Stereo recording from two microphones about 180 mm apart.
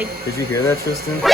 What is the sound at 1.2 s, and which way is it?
Speech, centre (ahead or behind).